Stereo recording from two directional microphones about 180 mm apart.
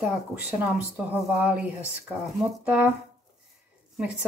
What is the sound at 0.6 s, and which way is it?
Speech, 5° right (ahead or behind).